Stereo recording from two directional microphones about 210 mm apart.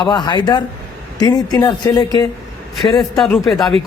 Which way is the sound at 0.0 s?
20° left (ahead or behind).